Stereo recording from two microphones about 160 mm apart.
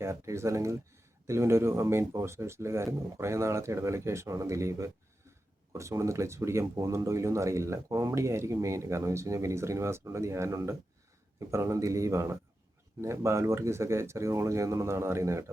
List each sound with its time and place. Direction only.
0.0 s speech: 15° right (ahead or behind)